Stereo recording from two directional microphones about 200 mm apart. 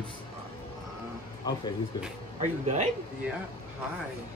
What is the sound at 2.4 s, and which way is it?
Speech, 35° right (ahead or behind).